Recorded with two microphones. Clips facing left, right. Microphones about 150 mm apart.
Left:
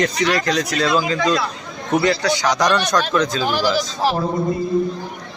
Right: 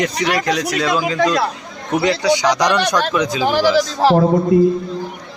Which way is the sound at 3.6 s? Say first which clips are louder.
Right 7 dB; 80° right.